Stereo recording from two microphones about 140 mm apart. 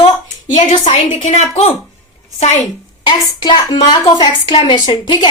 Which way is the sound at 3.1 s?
35° left (ahead or behind).